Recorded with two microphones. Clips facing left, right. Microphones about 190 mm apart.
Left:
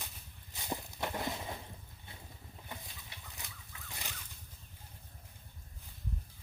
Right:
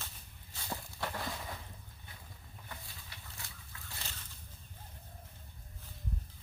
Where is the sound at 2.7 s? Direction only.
20° left (ahead or behind).